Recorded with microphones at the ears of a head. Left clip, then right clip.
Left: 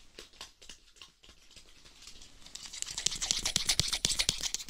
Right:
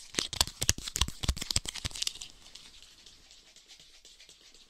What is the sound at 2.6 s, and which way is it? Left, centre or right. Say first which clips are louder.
Toothbrush: left 16 dB; left.